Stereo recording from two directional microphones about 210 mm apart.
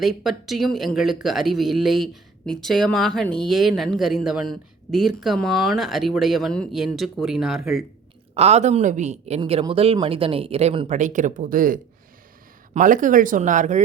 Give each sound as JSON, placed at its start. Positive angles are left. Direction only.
{"t": 0.0, "sound": "speech", "side_deg": 0}
{"t": 8.4, "sound": "a woman's voice", "side_deg": -30}